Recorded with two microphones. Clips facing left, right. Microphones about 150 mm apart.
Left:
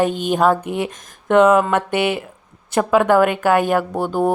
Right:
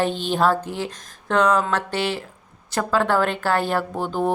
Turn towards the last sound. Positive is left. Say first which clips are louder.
# left 4 dB
turn(degrees=10)  # may be behind; listen again after turning